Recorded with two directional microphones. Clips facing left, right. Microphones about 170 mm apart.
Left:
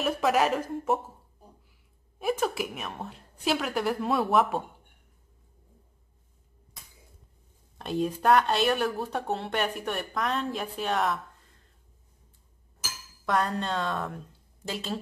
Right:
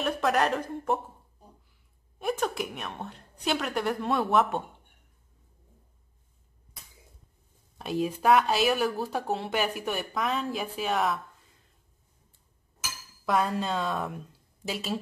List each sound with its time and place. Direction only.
0.0 s speech: 5° left (ahead or behind)
7.8 s speech: 5° right (ahead or behind)
13.2 s a woman's voice: 5° right (ahead or behind)